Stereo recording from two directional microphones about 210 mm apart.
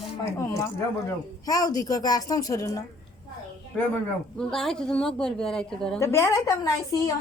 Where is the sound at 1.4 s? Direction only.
15° left (ahead or behind).